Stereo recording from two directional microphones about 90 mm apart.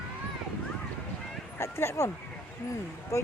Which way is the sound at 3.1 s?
35° left (ahead or behind).